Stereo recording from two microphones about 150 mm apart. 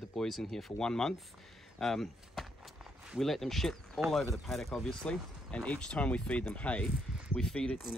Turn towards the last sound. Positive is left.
turn(degrees=5)  # may be behind; listen again after turning